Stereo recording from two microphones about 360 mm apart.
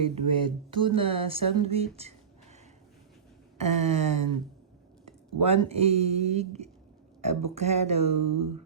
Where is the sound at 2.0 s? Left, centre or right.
Centre.